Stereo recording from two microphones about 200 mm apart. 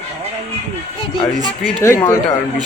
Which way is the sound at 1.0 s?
25° left (ahead or behind).